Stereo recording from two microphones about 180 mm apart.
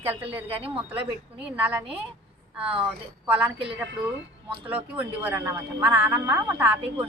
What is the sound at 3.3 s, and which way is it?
Speech, 10° right (ahead or behind).